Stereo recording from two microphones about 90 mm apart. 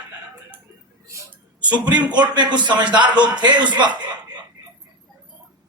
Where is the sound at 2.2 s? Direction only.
55° right (ahead or behind).